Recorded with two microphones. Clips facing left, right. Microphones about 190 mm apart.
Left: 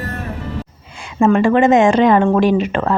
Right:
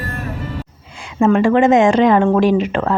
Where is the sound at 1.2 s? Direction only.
90° right.